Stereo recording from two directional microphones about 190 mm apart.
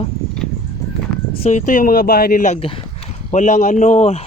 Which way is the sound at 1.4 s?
40° left (ahead or behind).